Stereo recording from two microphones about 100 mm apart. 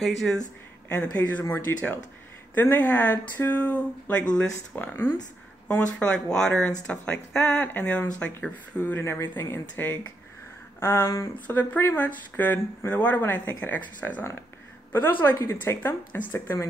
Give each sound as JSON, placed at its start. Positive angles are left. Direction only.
{"t": 0.0, "sound": "speech", "side_deg": 5}
{"t": 0.8, "sound": "speech", "side_deg": 15}
{"t": 11.3, "sound": "speech", "side_deg": 15}
{"t": 15.2, "sound": "speech", "side_deg": 25}